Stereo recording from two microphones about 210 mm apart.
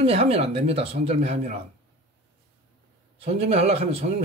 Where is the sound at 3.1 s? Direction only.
30° right (ahead or behind).